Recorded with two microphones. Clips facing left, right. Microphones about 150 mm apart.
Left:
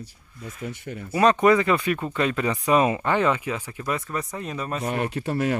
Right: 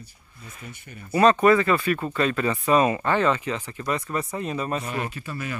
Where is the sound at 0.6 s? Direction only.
85° left.